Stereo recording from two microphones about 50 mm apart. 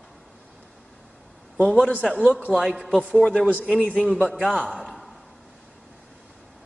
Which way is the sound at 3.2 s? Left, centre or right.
Left.